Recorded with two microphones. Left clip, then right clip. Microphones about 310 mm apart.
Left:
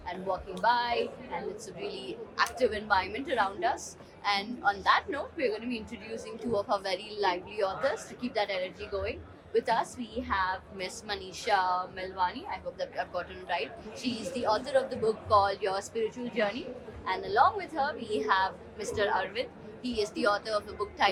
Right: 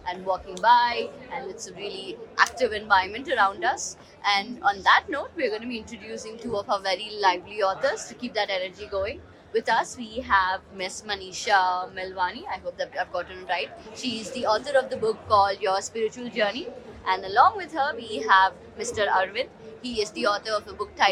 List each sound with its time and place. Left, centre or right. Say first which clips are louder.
0.0 s a woman's voice: right 6 dB; right